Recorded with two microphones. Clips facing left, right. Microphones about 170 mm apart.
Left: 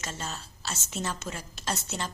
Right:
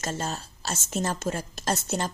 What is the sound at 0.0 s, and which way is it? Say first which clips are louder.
A woman's voice: right 6 dB; 45° right (ahead or behind).